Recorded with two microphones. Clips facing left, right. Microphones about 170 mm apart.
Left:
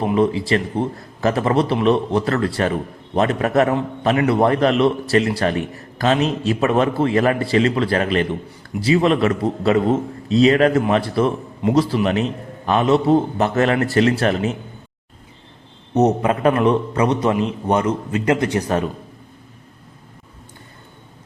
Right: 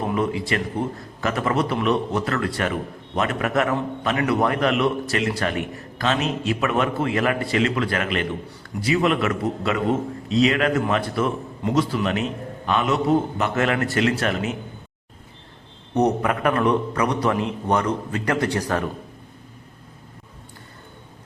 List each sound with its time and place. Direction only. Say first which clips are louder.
0.0 s a man's voice: left 6 dB; 25° left (ahead or behind)
16.0 s a man's voice: left 4 dB; 25° left (ahead or behind)